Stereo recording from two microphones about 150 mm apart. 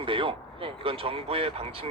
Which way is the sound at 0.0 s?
35° right (ahead or behind).